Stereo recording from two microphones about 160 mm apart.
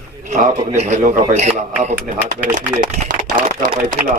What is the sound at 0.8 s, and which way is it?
Speech, 50° right (ahead or behind).